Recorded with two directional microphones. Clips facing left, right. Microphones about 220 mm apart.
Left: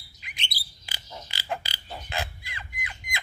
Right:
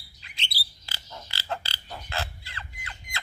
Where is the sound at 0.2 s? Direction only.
15° left (ahead or behind).